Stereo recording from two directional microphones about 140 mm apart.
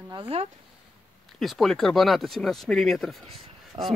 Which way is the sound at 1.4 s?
Centre (ahead or behind).